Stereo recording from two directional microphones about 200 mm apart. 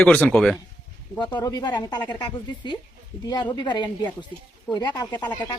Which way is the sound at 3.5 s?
20° left (ahead or behind).